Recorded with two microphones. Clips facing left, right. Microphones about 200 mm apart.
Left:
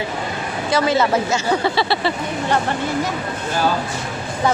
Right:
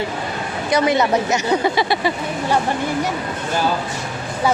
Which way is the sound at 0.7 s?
20° right (ahead or behind).